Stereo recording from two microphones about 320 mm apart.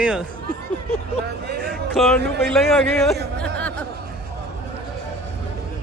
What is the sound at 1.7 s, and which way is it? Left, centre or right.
Speech, centre.